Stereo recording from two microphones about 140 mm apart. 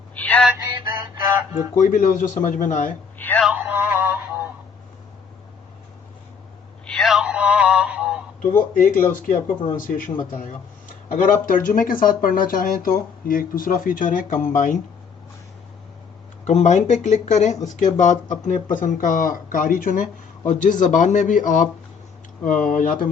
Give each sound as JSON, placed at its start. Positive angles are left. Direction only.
{"t": 0.1, "sound": "synthetic singing", "side_deg": 10}
{"t": 1.7, "sound": "speech", "side_deg": 70}
{"t": 3.2, "sound": "a sound", "side_deg": 15}
{"t": 3.4, "sound": "music", "side_deg": -10}
{"t": 6.8, "sound": "male singing", "side_deg": 5}
{"t": 8.4, "sound": "speech", "side_deg": 75}
{"t": 10.3, "sound": "speech", "side_deg": 70}
{"t": 11.1, "sound": "speech", "side_deg": 80}
{"t": 16.4, "sound": "speech", "side_deg": 55}
{"t": 20.5, "sound": "speech", "side_deg": 65}